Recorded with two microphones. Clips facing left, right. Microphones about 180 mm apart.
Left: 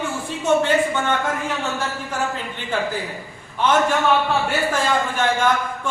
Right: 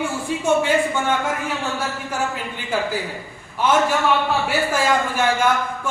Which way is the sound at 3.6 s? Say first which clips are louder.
Even; 5° right (ahead or behind).